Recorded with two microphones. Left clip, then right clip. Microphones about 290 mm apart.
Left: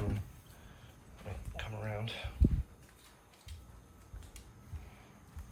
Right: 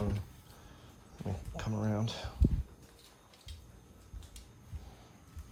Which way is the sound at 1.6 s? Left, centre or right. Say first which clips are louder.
Right 4 dB; right.